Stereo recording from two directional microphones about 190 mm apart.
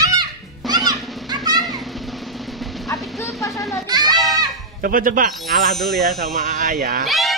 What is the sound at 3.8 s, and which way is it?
Speech, 20° right (ahead or behind).